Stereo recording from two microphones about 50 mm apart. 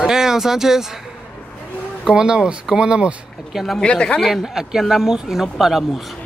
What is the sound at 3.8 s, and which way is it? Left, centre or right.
Speech, left.